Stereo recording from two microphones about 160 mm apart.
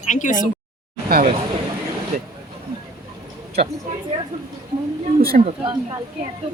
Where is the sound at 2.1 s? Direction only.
60° right (ahead or behind).